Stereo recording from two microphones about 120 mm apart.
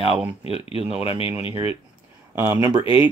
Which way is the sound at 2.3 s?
20° right (ahead or behind).